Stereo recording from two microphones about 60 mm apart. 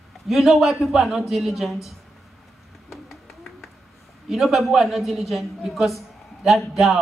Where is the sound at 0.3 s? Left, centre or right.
Centre.